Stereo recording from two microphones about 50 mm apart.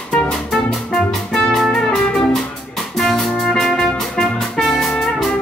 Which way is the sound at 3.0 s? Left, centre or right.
Centre.